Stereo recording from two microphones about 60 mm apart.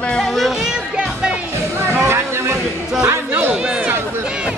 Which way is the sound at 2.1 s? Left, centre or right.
Right.